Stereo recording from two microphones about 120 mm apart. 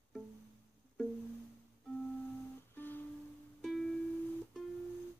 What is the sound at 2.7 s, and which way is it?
Music, 15° left (ahead or behind).